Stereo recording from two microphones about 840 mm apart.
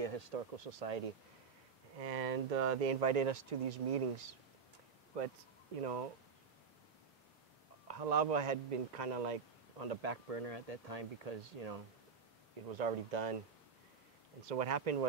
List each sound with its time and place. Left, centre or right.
0.0 s a man's voice: right
2.0 s a man's voice: right
5.1 s a man's voice: right
7.9 s a man's voice: right
14.5 s a man's voice: right